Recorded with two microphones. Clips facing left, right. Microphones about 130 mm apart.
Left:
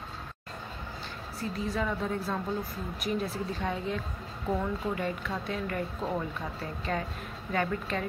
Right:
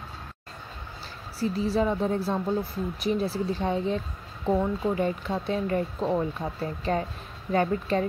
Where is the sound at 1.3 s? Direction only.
30° right (ahead or behind).